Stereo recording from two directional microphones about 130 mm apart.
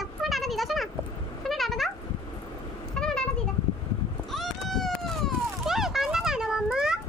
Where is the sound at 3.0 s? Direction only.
5° left (ahead or behind).